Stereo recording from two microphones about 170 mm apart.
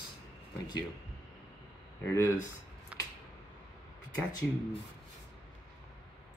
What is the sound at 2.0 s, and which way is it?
Speech, 15° left (ahead or behind).